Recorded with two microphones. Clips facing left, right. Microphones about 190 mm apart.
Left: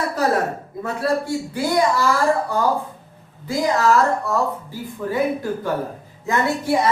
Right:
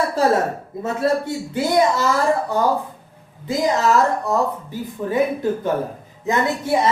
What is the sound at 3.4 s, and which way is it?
Speech, 20° right (ahead or behind).